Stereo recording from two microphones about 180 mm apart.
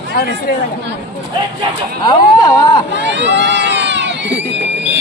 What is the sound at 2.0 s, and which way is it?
Speech, 25° left (ahead or behind).